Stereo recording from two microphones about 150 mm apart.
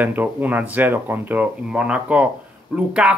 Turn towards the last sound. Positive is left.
turn(degrees=-5)  # may be behind; listen again after turning